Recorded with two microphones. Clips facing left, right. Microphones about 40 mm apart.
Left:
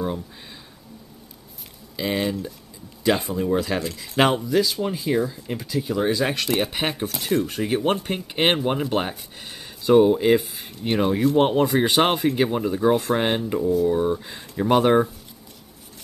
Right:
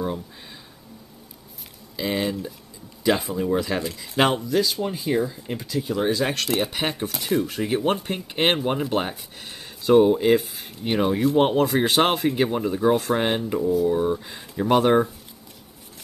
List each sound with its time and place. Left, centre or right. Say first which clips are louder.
0.0 s speech: left 1 dB; centre
2.0 s speech: left 1 dB; centre
7.7 s speech: left 1 dB; centre
8.0 s speech: left 1 dB; centre